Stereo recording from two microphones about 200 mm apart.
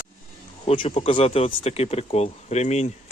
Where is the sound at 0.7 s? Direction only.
30° left (ahead or behind).